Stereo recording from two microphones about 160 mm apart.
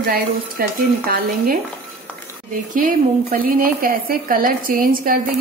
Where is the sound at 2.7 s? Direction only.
60° right (ahead or behind).